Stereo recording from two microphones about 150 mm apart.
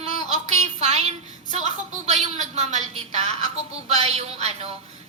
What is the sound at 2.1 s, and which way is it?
A woman's voice, 50° right (ahead or behind).